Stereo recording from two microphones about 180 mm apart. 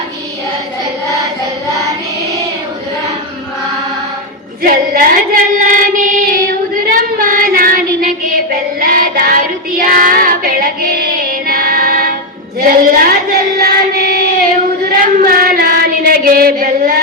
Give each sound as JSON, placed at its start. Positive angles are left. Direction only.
{"t": 4.6, "sound": "female singing", "side_deg": -50}
{"t": 6.9, "sound": "child singing", "side_deg": -50}